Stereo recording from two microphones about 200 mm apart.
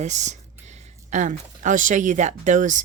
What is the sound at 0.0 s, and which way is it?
A woman's voice, 35° right (ahead or behind).